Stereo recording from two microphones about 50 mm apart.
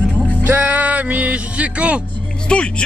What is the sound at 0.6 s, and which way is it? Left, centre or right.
Music, right.